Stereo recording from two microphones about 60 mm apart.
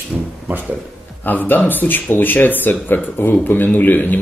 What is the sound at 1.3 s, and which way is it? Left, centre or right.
Speech, left.